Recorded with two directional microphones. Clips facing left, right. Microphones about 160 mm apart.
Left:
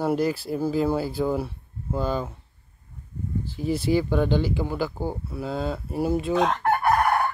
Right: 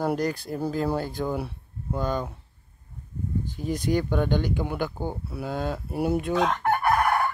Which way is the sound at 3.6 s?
5° left (ahead or behind).